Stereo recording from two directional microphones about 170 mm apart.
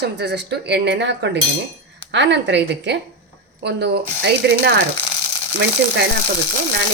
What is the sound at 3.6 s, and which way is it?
Speech, 80° right.